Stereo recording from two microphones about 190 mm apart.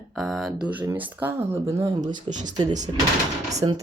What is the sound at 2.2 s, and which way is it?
Speech, 40° right (ahead or behind).